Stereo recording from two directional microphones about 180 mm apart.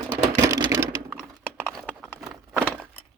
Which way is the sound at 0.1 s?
15° right (ahead or behind).